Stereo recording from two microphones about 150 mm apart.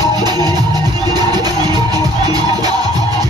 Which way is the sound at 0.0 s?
25° right (ahead or behind).